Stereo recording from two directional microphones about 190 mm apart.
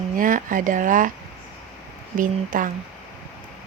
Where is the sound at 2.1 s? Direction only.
45° right (ahead or behind).